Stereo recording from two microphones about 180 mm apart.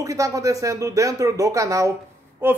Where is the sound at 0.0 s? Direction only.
20° right (ahead or behind).